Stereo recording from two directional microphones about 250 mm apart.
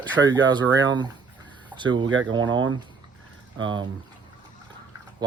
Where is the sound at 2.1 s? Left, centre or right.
Right.